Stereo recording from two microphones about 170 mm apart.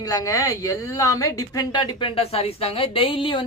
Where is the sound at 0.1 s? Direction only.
20° left (ahead or behind).